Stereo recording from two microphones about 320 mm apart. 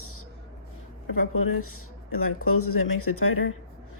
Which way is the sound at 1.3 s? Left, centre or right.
Left.